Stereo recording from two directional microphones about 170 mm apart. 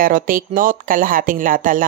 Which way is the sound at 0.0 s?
55° right (ahead or behind).